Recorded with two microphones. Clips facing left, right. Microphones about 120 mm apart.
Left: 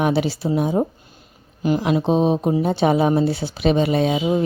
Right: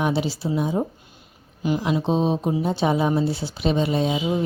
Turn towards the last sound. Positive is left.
turn(degrees=70)  # may be behind; listen again after turning